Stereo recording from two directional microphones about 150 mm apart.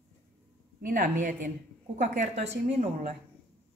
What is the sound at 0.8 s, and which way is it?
Speech, 65° right (ahead or behind).